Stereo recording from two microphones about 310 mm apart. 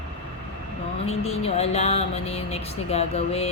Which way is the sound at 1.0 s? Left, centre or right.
Centre.